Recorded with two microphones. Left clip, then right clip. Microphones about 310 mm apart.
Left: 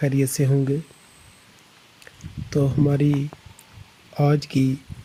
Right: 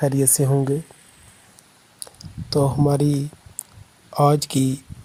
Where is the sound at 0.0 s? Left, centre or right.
Right.